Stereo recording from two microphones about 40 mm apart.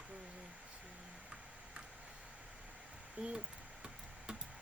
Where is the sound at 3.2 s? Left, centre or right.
Right.